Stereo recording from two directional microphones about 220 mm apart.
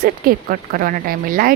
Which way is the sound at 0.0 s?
40° right (ahead or behind).